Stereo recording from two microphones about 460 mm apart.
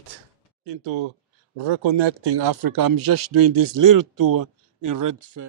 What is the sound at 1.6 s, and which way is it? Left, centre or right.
A man's voice, right.